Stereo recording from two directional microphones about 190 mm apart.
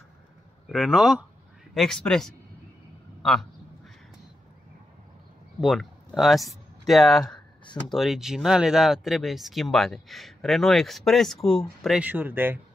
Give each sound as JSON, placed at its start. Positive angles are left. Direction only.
{"t": 0.7, "sound": "speech", "side_deg": -5}
{"t": 3.2, "sound": "a sound", "side_deg": 0}
{"t": 5.6, "sound": "speech", "side_deg": 0}